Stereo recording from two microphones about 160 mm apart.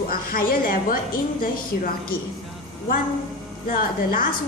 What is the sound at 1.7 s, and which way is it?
Speech, 75° left (ahead or behind).